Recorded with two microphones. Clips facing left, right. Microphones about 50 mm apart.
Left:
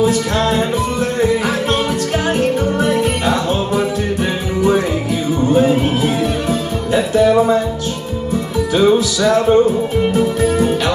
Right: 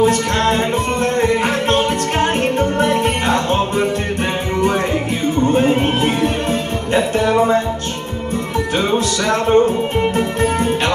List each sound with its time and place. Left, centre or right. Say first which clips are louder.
0.0 s music: even; right
8.7 s music: left 6 dB; right